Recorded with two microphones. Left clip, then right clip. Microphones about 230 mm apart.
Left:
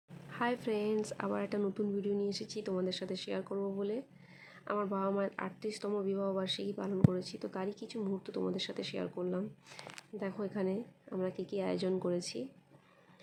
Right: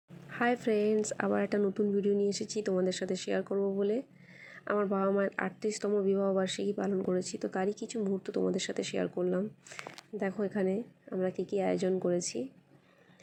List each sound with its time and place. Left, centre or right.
0.3 s speech: centre